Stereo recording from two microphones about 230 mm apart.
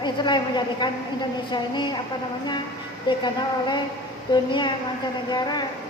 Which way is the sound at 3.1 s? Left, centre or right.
Centre.